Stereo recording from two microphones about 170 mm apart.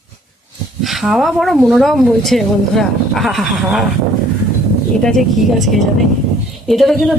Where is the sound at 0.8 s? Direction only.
Centre (ahead or behind).